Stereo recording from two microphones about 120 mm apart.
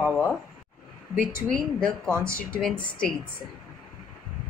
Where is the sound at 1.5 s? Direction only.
5° left (ahead or behind).